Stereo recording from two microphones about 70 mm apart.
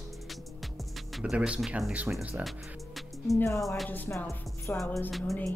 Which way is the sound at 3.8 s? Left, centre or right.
Left.